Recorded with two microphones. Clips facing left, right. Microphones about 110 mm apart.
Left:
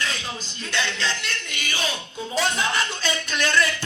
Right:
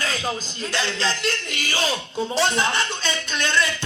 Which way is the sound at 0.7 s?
35° right (ahead or behind).